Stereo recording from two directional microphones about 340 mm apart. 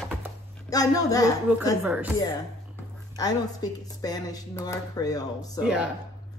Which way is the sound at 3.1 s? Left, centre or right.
Centre.